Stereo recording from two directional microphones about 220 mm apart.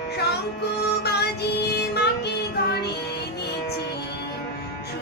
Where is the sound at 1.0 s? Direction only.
50° left (ahead or behind).